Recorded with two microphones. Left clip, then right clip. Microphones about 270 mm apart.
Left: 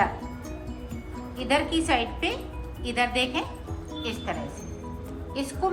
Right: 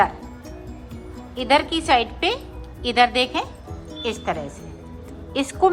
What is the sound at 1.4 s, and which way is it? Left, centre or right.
A woman's voice, centre.